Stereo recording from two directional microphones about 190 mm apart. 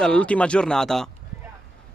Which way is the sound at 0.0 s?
5° left (ahead or behind).